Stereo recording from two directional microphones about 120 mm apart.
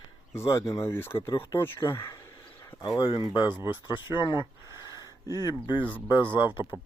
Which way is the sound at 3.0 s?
40° left (ahead or behind).